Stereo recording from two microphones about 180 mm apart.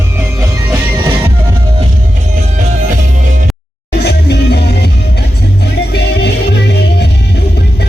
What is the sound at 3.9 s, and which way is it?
Music, 65° left (ahead or behind).